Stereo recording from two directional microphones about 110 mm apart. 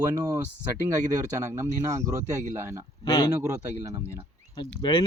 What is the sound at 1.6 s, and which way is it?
Speech, 25° right (ahead or behind).